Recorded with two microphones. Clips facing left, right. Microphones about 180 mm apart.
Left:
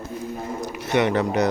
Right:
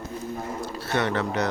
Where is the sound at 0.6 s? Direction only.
15° left (ahead or behind).